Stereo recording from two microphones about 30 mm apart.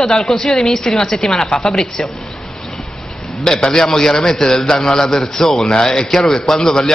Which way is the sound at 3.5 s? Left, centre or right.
Left.